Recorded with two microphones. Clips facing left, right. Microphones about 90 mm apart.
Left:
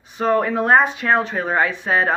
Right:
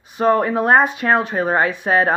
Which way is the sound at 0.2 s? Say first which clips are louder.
Right 2 dB; 45° right (ahead or behind).